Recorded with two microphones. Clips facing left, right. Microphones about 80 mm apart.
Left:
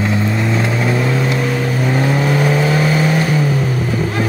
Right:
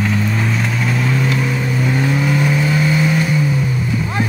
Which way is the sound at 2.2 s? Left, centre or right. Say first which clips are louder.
Left 2 dB; left.